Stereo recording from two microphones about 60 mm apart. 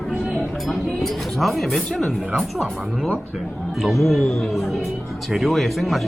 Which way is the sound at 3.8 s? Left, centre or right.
Centre.